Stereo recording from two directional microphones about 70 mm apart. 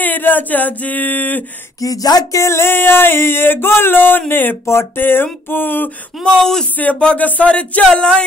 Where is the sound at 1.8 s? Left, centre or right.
Left.